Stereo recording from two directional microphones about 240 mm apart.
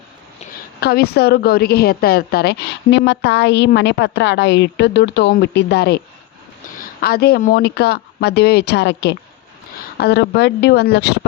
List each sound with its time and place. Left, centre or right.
0.8 s a woman's voice: left